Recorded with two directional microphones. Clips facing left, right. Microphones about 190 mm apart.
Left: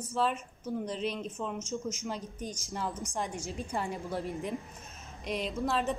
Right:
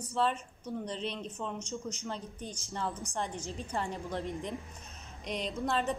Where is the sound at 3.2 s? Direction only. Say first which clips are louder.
Left 2 dB; 10° left (ahead or behind).